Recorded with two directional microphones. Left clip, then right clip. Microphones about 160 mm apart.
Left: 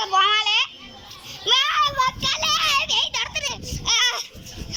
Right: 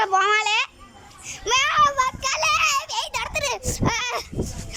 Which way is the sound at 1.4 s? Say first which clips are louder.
Left 1 dB; 15° right (ahead or behind).